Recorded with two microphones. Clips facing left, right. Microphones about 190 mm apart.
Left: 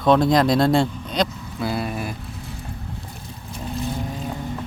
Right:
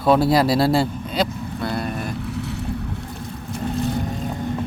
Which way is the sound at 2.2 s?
70° right (ahead or behind).